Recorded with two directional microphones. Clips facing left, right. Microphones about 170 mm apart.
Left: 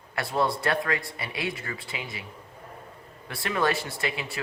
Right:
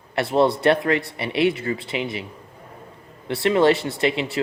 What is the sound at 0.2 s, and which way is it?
Speech, 25° right (ahead or behind).